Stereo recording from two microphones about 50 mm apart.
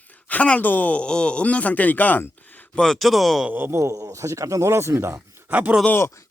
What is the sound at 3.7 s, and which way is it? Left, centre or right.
Speech, right.